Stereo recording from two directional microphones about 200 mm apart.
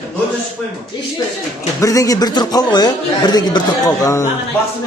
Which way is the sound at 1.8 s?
15° left (ahead or behind).